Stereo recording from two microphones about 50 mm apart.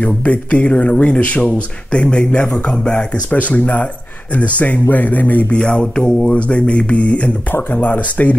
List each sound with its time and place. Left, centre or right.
0.0 s speech: left
5.6 s speech: centre